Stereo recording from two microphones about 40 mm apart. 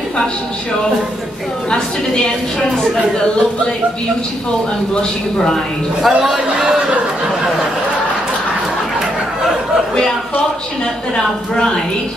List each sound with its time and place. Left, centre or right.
1.7 s a woman's voice: left
6.0 s a man's voice: centre
6.5 s a man's voice: right
11.5 s a woman's voice: centre